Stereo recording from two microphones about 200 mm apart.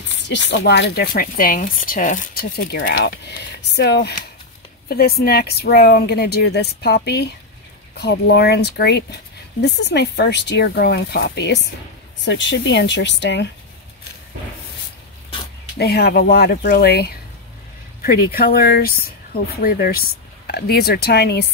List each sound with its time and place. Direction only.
0.0 s speech: 65° left (ahead or behind)
15.8 s speech: 50° left (ahead or behind)